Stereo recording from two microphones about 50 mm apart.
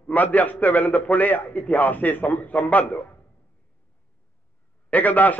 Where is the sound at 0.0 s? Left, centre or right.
Left.